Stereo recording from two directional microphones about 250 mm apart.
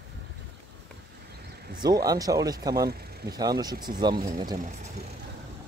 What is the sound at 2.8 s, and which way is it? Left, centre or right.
Vehicle, right.